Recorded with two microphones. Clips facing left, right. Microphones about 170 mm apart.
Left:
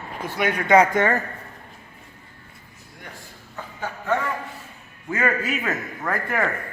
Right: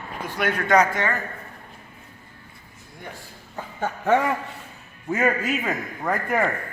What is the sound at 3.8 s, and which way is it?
Speech, 65° right (ahead or behind).